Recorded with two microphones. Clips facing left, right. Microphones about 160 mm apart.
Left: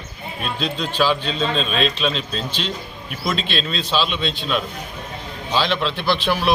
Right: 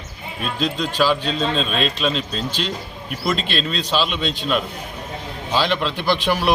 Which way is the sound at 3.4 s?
45° right (ahead or behind).